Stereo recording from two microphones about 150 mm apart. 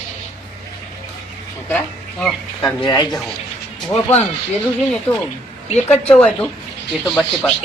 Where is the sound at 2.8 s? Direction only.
30° left (ahead or behind).